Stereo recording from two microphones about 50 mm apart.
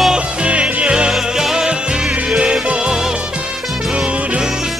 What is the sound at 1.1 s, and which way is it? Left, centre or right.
Music, centre.